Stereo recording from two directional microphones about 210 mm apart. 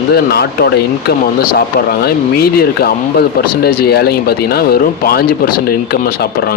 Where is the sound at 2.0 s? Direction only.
45° left (ahead or behind).